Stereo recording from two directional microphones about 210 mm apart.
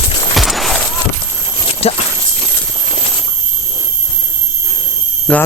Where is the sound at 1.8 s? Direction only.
30° left (ahead or behind).